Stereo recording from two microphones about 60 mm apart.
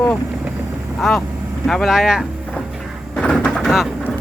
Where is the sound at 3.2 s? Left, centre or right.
Centre.